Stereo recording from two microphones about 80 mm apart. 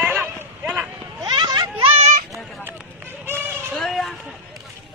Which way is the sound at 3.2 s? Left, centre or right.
Right.